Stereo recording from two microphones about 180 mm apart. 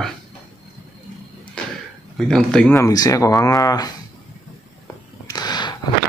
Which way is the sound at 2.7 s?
20° left (ahead or behind).